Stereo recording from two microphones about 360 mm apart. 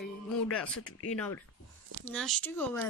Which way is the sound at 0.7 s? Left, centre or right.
Left.